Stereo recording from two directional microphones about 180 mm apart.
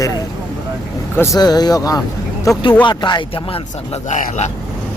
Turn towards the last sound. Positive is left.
turn(degrees=40)  # may be behind; listen again after turning